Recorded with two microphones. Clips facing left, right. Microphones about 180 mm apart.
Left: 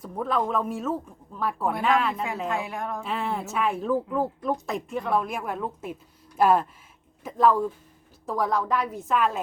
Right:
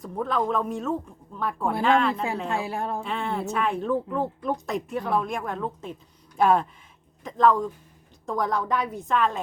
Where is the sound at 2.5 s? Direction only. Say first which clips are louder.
Right 1 dB; 30° right (ahead or behind).